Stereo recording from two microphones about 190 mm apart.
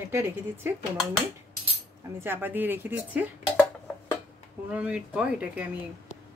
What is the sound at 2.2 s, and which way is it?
Speech, 10° right (ahead or behind).